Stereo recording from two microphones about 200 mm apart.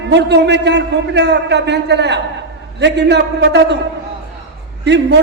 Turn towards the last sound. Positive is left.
turn(degrees=-60)  # may be behind; listen again after turning